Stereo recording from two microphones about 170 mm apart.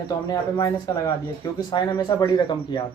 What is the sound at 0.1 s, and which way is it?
Speech, 20° left (ahead or behind).